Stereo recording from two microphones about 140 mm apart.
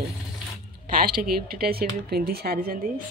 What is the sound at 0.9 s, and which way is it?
Speech, 90° right.